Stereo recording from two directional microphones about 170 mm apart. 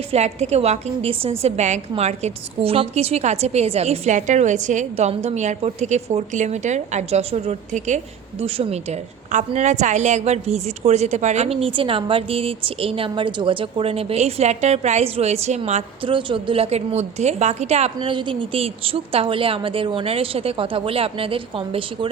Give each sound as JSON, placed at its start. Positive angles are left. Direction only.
{"t": 0.1, "sound": "a woman's voice", "side_deg": -40}